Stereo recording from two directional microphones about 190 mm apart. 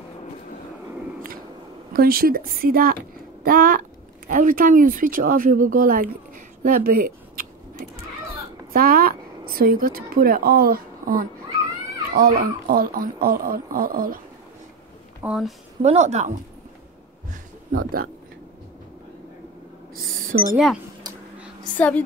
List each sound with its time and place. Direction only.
1.9 s speech: 50° right (ahead or behind)
15.2 s speech: centre (ahead or behind)
15.8 s a woman's voice: 35° right (ahead or behind)
20.3 s speech: 65° right (ahead or behind)
21.7 s a woman's voice: 10° left (ahead or behind)